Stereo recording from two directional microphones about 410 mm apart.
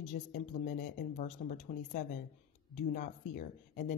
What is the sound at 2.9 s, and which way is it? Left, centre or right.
Speech, centre.